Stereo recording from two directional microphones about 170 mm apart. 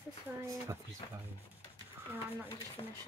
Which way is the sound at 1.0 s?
25° left (ahead or behind).